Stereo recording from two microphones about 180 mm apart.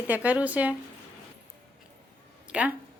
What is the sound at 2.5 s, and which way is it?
Speech, 5° right (ahead or behind).